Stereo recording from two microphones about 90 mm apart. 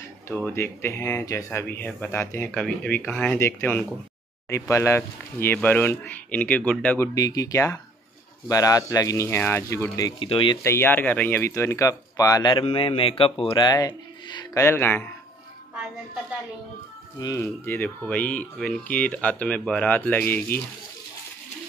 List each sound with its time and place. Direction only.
0.5 s speech: 30° left (ahead or behind)
2.5 s speech: 10° left (ahead or behind)
3.3 s speech: 30° left (ahead or behind)
7.2 s speech: 40° left (ahead or behind)
10.1 s speech: 85° left
10.6 s speech: 25° left (ahead or behind); by 12.6 s 45° left (ahead or behind)
12.7 s speech: 85° left; by 14.6 s 50° left (ahead or behind)
14.6 s speech: 25° left (ahead or behind)
17.4 s speech: 25° left (ahead or behind)